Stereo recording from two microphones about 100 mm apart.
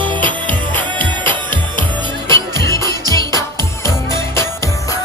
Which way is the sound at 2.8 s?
40° right (ahead or behind).